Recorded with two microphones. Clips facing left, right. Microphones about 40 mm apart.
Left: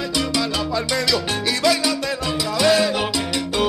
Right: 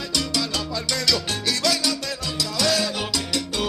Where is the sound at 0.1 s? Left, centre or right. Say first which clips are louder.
Left 2 dB; left.